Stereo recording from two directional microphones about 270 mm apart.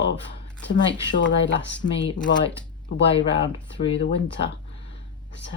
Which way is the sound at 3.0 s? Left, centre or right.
Centre.